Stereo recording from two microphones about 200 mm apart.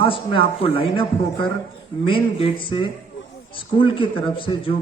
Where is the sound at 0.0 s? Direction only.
25° left (ahead or behind).